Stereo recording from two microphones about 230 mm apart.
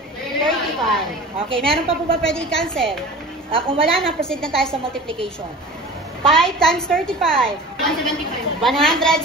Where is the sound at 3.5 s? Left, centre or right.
Right.